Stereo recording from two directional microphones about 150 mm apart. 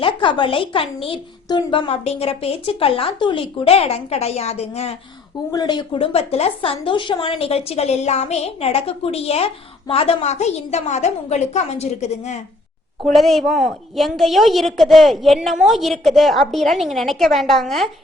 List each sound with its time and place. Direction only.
0.0 s a woman's voice: 35° left (ahead or behind)
1.9 s a woman's voice: 45° left (ahead or behind)
5.5 s a woman's voice: 25° left (ahead or behind); by 12.4 s 50° left (ahead or behind)
13.1 s a woman's voice: centre (ahead or behind)